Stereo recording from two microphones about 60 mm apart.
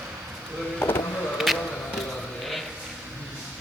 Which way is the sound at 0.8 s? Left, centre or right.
Left.